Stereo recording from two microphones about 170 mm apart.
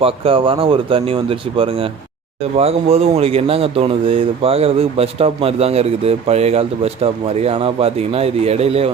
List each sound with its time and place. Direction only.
0.0 s speech: 30° right (ahead or behind)